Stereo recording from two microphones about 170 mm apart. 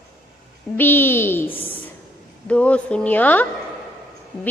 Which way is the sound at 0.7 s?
10° left (ahead or behind).